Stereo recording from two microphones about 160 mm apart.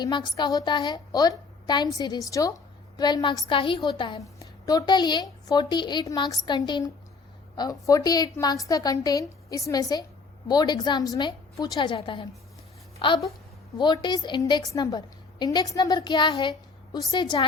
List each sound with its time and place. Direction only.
0.0 s a woman's voice: 25° left (ahead or behind)